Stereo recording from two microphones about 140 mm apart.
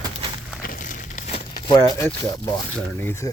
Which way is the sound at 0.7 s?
70° left (ahead or behind).